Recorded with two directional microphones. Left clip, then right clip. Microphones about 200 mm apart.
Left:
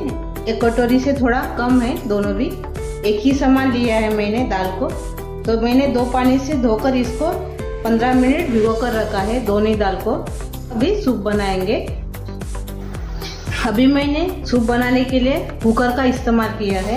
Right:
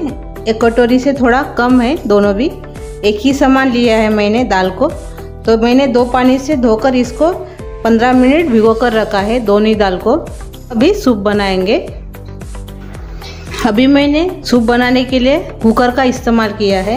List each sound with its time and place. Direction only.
0.5 s a woman's voice: 50° right (ahead or behind)
13.7 s a woman's voice: 40° right (ahead or behind)